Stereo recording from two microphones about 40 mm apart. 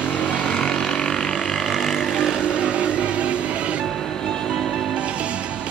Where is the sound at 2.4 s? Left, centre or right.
Right.